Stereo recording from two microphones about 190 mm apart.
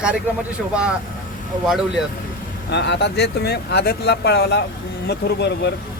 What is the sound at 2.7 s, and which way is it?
Speech, 65° left (ahead or behind).